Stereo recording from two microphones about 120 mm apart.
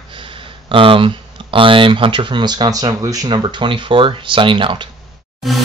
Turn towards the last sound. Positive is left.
turn(degrees=0)  # may be behind; listen again after turning